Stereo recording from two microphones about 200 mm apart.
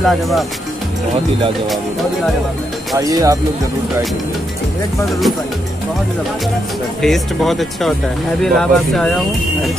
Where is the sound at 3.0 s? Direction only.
15° right (ahead or behind).